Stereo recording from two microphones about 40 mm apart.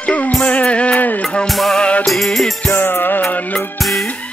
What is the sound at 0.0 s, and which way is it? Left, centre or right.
Music, left.